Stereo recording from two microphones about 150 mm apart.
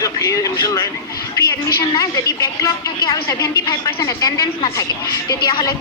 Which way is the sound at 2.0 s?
20° left (ahead or behind).